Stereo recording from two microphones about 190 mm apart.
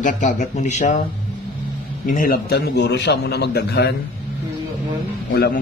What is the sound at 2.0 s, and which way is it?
A man's voice, 45° left (ahead or behind).